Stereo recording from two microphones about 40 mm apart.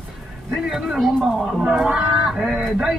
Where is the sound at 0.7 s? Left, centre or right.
Centre.